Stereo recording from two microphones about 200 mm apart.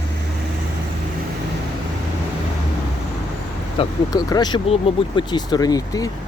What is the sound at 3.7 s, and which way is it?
Speech, 20° left (ahead or behind).